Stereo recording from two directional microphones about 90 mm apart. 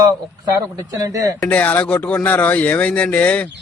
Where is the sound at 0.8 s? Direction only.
40° right (ahead or behind).